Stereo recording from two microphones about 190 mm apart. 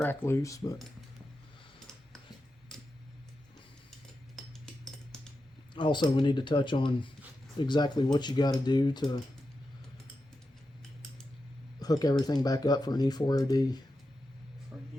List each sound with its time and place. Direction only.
0.0 s speech: 10° left (ahead or behind)
5.7 s speech: 25° left (ahead or behind)
11.8 s speech: 20° left (ahead or behind)